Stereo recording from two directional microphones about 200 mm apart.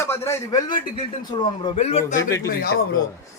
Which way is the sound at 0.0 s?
15° left (ahead or behind).